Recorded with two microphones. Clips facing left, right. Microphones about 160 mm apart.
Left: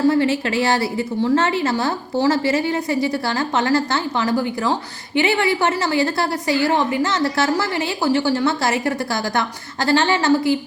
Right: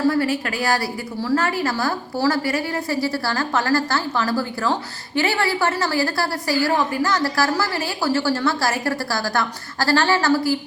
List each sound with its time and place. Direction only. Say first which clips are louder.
0.1 s a woman's voice: left 3 dB; 25° left (ahead or behind)